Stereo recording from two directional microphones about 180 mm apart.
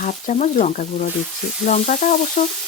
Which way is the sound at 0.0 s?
45° left (ahead or behind).